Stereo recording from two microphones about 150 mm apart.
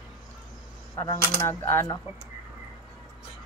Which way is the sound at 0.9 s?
25° left (ahead or behind).